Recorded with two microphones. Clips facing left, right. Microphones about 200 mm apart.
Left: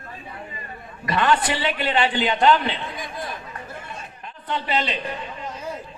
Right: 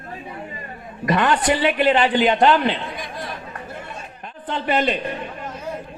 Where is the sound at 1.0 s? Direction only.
45° right (ahead or behind).